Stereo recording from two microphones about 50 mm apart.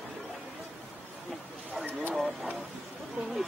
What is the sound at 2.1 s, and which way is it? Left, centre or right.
Speech, centre.